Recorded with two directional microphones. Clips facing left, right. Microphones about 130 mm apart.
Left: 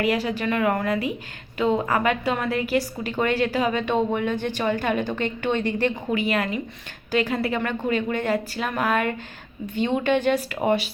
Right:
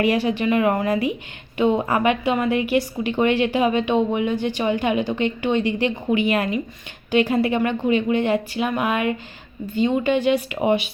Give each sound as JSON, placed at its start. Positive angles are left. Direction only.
{"t": 0.0, "sound": "a woman's voice", "side_deg": -25}
{"t": 2.5, "sound": "a woman's voice", "side_deg": 35}
{"t": 3.5, "sound": "speech", "side_deg": -20}
{"t": 6.3, "sound": "a woman's voice", "side_deg": -25}